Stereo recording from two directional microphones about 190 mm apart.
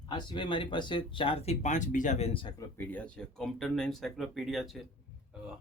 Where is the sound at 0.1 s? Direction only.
25° left (ahead or behind).